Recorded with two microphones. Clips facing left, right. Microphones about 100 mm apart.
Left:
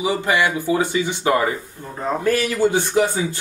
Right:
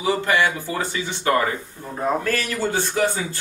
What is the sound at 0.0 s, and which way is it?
Speech, 15° left (ahead or behind).